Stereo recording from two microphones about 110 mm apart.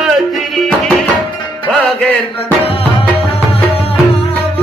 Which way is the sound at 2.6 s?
60° left (ahead or behind).